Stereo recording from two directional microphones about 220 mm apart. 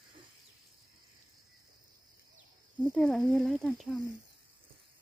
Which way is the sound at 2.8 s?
5° left (ahead or behind).